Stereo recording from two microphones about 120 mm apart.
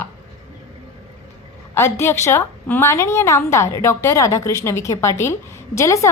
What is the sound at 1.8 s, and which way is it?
A woman's voice, 20° left (ahead or behind).